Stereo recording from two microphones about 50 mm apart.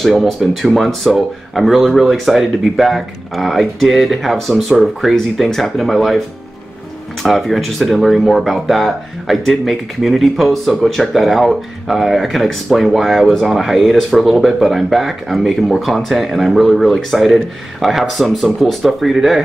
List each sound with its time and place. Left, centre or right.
0.0 s speech: centre
7.2 s speech: centre